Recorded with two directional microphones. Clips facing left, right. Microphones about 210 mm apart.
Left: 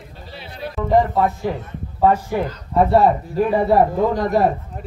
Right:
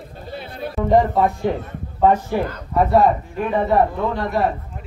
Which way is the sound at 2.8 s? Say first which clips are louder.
Right 1 dB; 35° left (ahead or behind).